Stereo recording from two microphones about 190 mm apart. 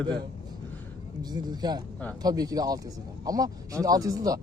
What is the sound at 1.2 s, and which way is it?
Speech, 20° right (ahead or behind).